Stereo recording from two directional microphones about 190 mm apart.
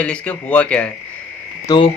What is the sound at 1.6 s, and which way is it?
Frog, 25° left (ahead or behind).